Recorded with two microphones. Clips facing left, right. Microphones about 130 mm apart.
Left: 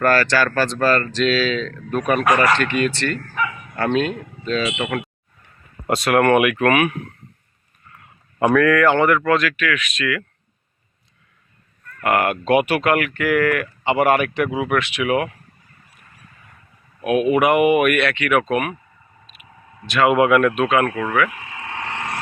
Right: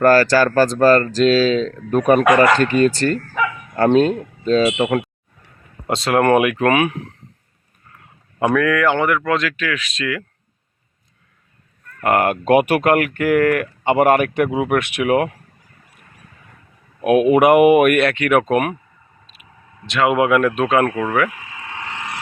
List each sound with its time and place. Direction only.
0.0 s speech: 35° right (ahead or behind)
8.5 s speech: 10° right (ahead or behind); by 10.2 s 25° right (ahead or behind)
11.9 s speech: 35° right (ahead or behind)
17.0 s speech: 55° right (ahead or behind)
19.9 s speech: 20° right (ahead or behind)
20.6 s speech: 35° right (ahead or behind)
20.8 s speech: 15° right (ahead or behind)
21.6 s vehicle: 30° left (ahead or behind)